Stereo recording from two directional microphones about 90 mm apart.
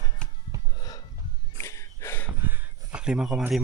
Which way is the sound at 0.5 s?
35° right (ahead or behind).